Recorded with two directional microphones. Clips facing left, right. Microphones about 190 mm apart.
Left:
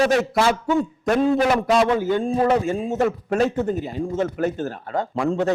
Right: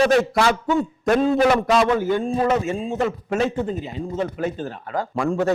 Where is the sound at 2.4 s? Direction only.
35° left (ahead or behind).